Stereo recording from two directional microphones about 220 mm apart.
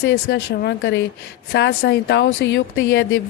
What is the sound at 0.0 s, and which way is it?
Speech, 50° left (ahead or behind).